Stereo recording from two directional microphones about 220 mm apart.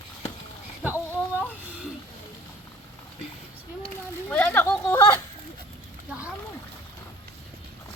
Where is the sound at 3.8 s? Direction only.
5° left (ahead or behind).